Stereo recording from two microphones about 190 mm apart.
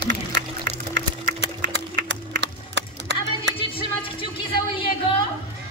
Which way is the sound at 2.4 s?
65° right (ahead or behind).